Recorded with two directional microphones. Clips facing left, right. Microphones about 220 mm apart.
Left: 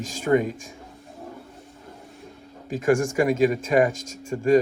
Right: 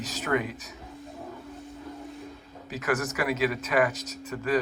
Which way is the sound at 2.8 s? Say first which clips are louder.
Left 8 dB; 30° left (ahead or behind).